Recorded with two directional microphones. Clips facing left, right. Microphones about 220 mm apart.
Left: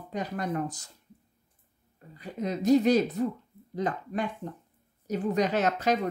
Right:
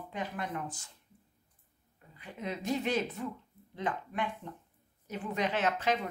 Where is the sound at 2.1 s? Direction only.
40° left (ahead or behind).